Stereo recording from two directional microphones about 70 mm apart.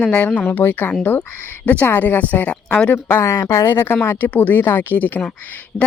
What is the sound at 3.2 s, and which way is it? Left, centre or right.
Speech, left.